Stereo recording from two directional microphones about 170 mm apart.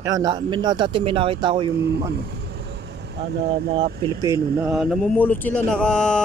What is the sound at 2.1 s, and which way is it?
Vehicle, 70° right (ahead or behind).